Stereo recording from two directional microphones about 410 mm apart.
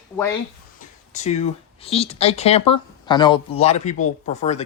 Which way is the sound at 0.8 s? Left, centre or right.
Centre.